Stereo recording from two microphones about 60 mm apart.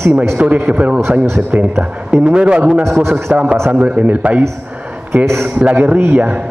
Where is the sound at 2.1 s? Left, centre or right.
Centre.